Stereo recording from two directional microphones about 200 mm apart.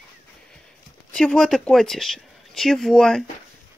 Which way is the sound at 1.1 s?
5° left (ahead or behind).